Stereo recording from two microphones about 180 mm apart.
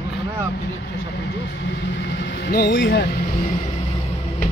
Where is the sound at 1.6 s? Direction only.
75° left (ahead or behind).